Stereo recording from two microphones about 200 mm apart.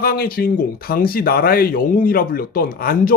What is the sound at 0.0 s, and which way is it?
Speech, 50° left (ahead or behind).